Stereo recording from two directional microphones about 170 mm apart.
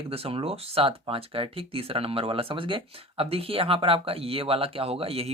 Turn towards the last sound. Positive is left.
turn(degrees=-35)  # may be behind; listen again after turning